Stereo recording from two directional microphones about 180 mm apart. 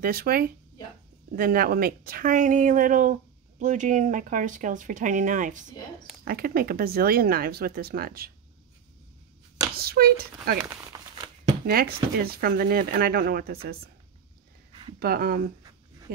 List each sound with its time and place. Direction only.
0.0 s speech: 55° right (ahead or behind)
9.8 s speech: 60° right (ahead or behind)
10.9 s a sound: 20° right (ahead or behind)
11.6 s speech: 55° right (ahead or behind)
14.7 s a sound: 30° right (ahead or behind)
15.0 s speech: 60° right (ahead or behind)